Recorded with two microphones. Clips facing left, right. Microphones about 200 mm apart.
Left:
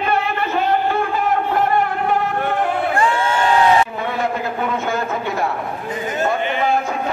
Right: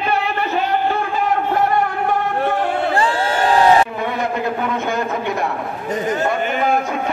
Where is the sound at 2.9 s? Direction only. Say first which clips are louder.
Even; 35° right (ahead or behind).